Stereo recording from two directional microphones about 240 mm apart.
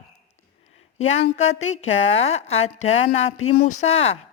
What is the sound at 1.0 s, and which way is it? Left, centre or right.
A woman's voice, left.